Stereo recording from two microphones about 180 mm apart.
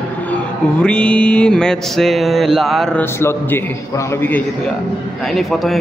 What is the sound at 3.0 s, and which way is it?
A man's voice, 15° left (ahead or behind).